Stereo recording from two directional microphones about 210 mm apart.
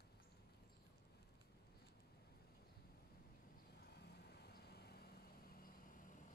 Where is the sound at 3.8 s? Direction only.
50° left (ahead or behind).